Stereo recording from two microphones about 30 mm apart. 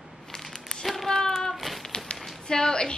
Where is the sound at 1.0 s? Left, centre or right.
Centre.